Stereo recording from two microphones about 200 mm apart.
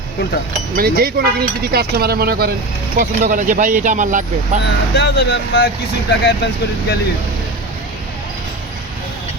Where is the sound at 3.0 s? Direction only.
40° right (ahead or behind).